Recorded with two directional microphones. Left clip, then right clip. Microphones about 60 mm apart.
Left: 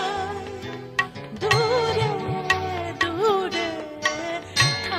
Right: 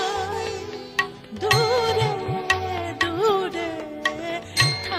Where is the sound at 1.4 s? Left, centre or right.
Right.